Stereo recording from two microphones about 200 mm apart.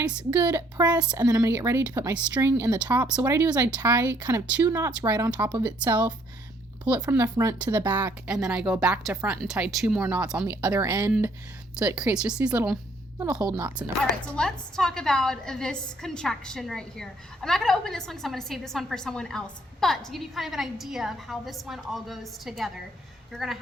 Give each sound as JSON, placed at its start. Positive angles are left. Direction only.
{"t": 0.0, "sound": "a woman's voice", "side_deg": -5}
{"t": 0.4, "sound": "speech", "side_deg": -20}
{"t": 7.1, "sound": "a woman's voice", "side_deg": -15}
{"t": 14.3, "sound": "a woman's voice", "side_deg": 5}